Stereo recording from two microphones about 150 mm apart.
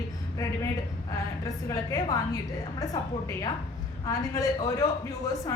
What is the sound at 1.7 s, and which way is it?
A woman's voice, 25° left (ahead or behind).